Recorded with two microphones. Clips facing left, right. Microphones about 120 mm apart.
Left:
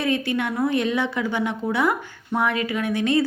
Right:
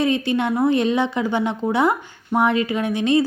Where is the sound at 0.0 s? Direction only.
25° right (ahead or behind).